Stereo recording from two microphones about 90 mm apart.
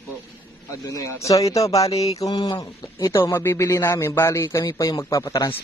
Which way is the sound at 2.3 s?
60° left (ahead or behind).